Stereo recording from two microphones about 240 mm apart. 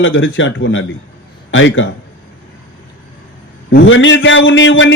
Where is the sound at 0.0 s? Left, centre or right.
Left.